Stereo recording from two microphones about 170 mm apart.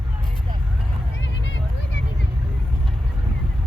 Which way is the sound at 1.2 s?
90° left.